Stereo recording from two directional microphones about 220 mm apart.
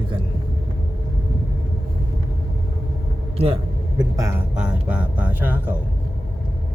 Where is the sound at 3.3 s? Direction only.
25° right (ahead or behind).